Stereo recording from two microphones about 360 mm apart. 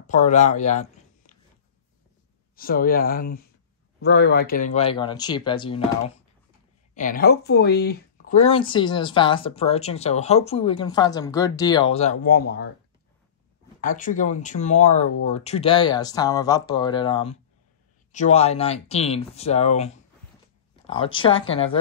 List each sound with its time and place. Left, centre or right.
0.0 s speech: left
2.5 s speech: left
7.0 s speech: left
13.7 s speech: left